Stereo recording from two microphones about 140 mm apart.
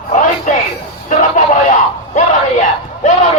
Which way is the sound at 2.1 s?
60° left (ahead or behind).